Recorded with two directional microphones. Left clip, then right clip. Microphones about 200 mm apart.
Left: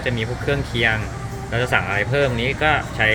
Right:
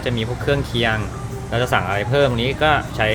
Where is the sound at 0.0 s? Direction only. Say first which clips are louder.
Right 1 dB; 20° right (ahead or behind).